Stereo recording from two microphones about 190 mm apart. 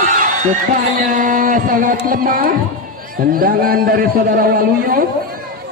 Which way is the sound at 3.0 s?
50° right (ahead or behind).